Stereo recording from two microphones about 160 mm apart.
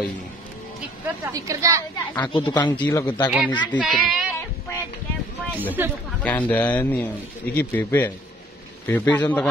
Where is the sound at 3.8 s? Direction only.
5° right (ahead or behind).